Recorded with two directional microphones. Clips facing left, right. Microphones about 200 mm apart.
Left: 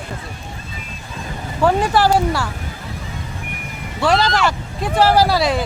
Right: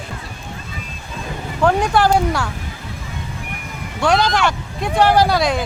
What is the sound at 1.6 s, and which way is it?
Speech, 5° left (ahead or behind).